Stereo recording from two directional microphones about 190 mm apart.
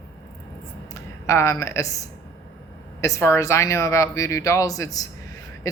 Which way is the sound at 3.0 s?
15° left (ahead or behind).